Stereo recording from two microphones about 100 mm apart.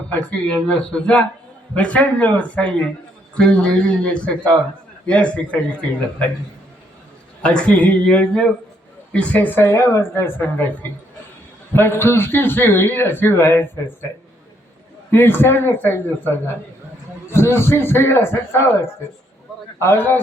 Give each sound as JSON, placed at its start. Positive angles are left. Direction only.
{"t": 0.1, "sound": "speech", "side_deg": 10}
{"t": 7.4, "sound": "a man's voice", "side_deg": 10}
{"t": 15.1, "sound": "a man's voice", "side_deg": 20}
{"t": 19.8, "sound": "a man's voice", "side_deg": 20}